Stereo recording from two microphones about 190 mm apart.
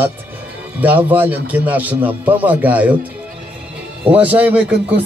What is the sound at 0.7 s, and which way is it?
Speech, 10° right (ahead or behind).